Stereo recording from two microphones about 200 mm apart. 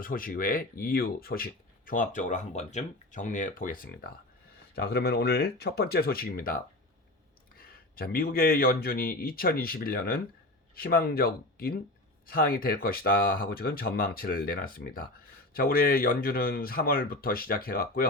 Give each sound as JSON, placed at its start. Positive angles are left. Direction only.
{"t": 0.0, "sound": "speech", "side_deg": 45}
{"t": 7.9, "sound": "speech", "side_deg": 50}